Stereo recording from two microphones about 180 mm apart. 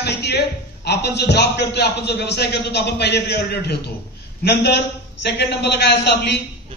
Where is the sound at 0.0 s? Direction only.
65° left (ahead or behind).